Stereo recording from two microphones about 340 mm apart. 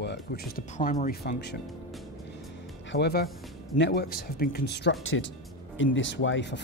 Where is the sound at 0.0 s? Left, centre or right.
Left.